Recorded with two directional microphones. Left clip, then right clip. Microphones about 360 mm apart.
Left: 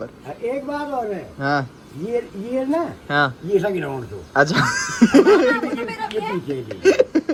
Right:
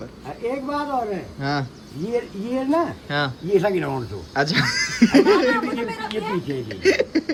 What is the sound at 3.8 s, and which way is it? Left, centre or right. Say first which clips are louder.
Speech: right 1 dB; centre.